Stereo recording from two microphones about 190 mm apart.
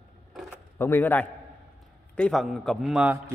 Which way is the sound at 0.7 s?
10° left (ahead or behind).